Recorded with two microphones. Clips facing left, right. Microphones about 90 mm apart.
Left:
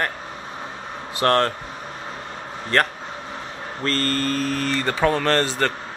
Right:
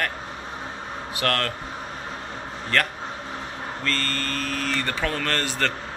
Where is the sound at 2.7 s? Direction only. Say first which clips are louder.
Left 4 dB; 35° left (ahead or behind).